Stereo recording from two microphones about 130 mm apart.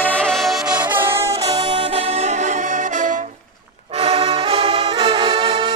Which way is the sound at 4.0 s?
45° right (ahead or behind).